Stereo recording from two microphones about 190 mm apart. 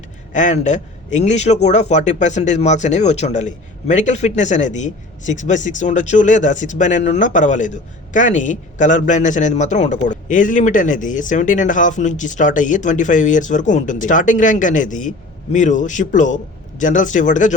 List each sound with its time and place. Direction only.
0.3 s speech: 40° left (ahead or behind)